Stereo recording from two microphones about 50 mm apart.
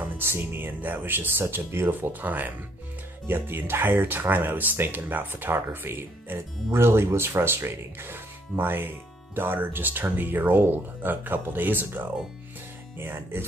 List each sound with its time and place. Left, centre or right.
0.2 s speech: right
0.7 s speech: right
1.5 s speech: right
1.9 s speech: right
3.3 s speech: right